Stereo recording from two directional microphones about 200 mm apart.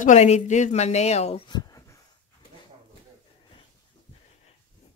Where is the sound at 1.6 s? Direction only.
20° left (ahead or behind).